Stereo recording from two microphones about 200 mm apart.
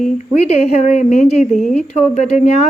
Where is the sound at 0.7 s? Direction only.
35° left (ahead or behind).